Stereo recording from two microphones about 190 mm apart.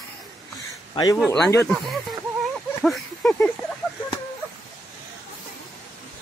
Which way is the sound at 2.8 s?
Centre (ahead or behind).